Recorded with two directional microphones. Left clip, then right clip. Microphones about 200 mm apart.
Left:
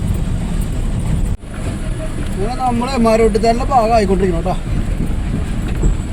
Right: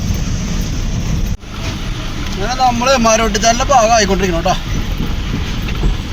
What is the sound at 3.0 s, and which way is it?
Speech, 5° right (ahead or behind).